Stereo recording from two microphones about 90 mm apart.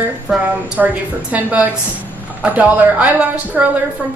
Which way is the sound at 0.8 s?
10° right (ahead or behind).